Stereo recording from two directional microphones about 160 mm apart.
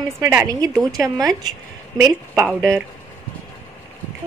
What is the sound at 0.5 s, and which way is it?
A woman's voice, 20° right (ahead or behind).